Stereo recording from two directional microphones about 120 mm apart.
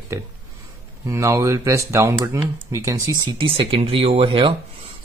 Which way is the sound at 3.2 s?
45° right (ahead or behind).